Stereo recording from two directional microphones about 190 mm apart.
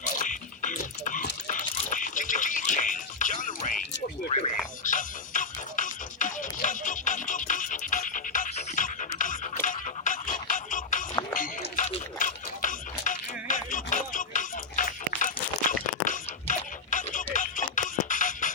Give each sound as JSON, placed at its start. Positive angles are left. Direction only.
{"t": 0.2, "sound": "dog", "side_deg": 45}
{"t": 1.5, "sound": "music", "side_deg": 40}
{"t": 4.3, "sound": "a sound", "side_deg": 35}
{"t": 4.8, "sound": "music", "side_deg": 45}
{"t": 11.1, "sound": "music", "side_deg": 15}
{"t": 11.3, "sound": "a sound", "side_deg": 45}
{"t": 17.3, "sound": "music", "side_deg": 45}